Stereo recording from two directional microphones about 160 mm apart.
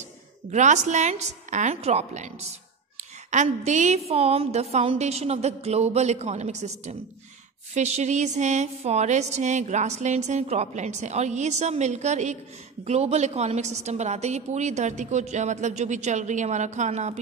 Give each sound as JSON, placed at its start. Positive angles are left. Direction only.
{"t": 0.5, "sound": "a woman's voice", "side_deg": -50}